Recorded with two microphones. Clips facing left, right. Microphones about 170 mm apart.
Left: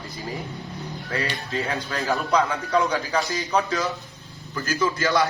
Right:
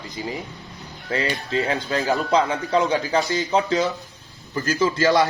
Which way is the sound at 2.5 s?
25° right (ahead or behind).